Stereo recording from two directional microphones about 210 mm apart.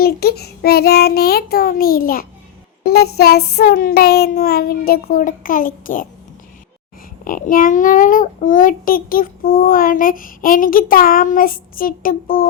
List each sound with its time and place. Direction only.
0.0 s child singing: 50° left (ahead or behind)
7.3 s a child's voice: 40° left (ahead or behind)